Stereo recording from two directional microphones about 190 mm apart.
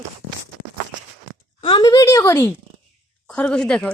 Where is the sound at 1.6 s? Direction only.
25° left (ahead or behind).